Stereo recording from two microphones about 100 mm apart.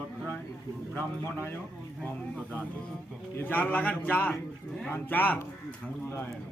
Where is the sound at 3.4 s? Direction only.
15° left (ahead or behind).